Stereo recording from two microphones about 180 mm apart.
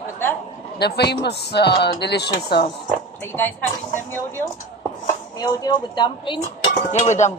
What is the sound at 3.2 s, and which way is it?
Speech, 15° left (ahead or behind).